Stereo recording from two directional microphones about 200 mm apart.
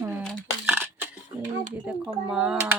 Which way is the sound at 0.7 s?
10° right (ahead or behind).